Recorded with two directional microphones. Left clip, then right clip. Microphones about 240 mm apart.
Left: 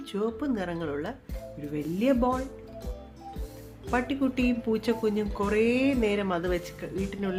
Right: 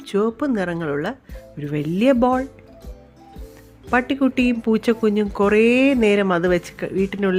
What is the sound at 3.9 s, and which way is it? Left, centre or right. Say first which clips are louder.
Speech: right 9 dB; right.